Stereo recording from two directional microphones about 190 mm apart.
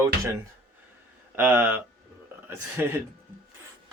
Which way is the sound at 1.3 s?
10° right (ahead or behind).